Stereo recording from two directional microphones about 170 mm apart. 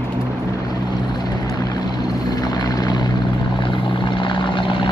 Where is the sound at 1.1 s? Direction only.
25° left (ahead or behind).